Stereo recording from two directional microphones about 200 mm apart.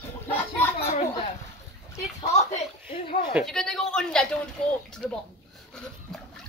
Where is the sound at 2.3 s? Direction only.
35° left (ahead or behind).